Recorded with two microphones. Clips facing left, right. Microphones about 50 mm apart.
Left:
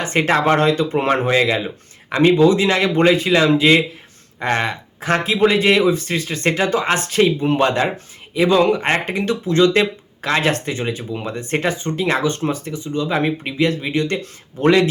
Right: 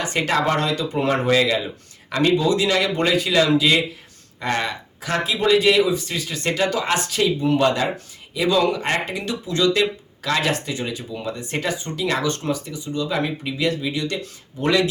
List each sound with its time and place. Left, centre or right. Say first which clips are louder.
0.0 s speech: left 4 dB; left